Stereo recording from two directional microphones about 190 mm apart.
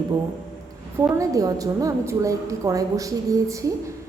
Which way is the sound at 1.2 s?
20° right (ahead or behind).